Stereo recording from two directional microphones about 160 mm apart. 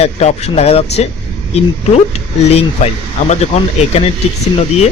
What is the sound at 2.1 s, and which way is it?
Speech, 40° left (ahead or behind).